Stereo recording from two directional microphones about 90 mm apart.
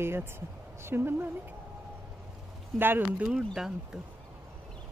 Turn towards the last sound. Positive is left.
turn(degrees=-5)  # may be behind; listen again after turning